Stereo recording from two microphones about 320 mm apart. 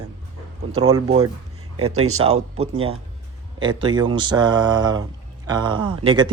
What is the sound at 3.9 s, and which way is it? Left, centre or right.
Speech, centre.